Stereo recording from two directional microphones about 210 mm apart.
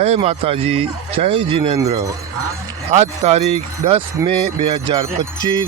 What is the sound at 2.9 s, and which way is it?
Speech, 30° right (ahead or behind).